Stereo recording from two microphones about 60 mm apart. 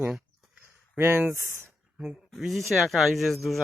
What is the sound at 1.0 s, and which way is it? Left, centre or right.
Speech, right.